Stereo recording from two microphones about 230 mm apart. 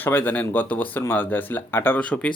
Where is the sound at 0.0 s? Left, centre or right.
Centre.